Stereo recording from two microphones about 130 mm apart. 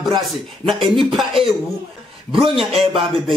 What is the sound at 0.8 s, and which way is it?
Speech, centre (ahead or behind).